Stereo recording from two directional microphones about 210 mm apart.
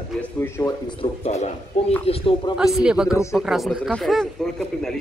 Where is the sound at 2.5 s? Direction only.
5° right (ahead or behind).